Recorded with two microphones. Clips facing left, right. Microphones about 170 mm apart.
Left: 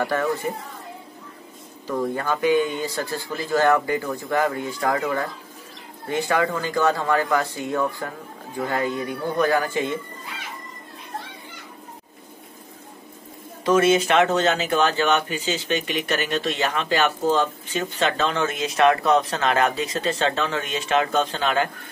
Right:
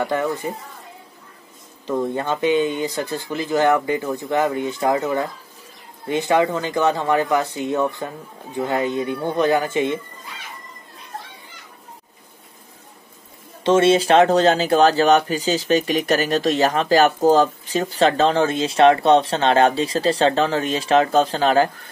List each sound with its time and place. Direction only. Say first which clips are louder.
0.0 s speech: right 1 dB; 20° right (ahead or behind)
1.9 s speech: right 2 dB; 20° right (ahead or behind)
13.7 s speech: right 3 dB; 30° right (ahead or behind)